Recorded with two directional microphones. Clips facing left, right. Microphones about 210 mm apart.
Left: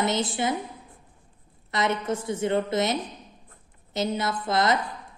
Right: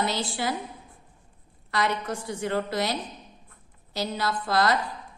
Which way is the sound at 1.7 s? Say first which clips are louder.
Left 2 dB; 20° left (ahead or behind).